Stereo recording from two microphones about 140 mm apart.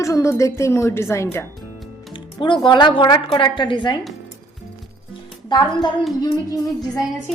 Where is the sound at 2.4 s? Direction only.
35° left (ahead or behind).